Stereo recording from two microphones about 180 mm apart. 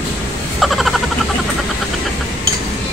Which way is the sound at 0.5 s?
Centre (ahead or behind).